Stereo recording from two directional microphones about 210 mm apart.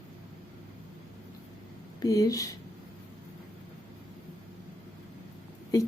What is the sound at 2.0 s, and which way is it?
Speech, 15° left (ahead or behind).